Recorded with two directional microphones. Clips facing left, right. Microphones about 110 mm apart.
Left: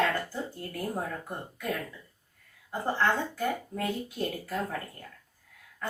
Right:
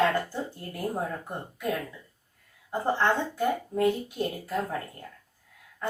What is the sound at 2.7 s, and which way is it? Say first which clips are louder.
Speech: right 2 dB; 20° right (ahead or behind).